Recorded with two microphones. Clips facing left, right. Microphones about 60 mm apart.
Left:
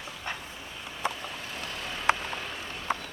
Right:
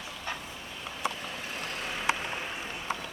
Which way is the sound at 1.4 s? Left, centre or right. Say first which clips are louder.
Right 1 dB; centre.